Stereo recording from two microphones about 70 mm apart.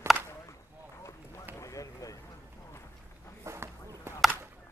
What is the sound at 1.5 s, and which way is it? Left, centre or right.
Vehicle, left.